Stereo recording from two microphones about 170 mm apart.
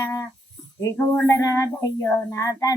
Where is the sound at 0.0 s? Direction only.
20° left (ahead or behind).